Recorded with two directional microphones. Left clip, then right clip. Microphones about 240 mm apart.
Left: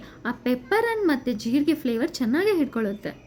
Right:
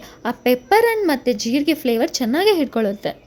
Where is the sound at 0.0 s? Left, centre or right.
Centre.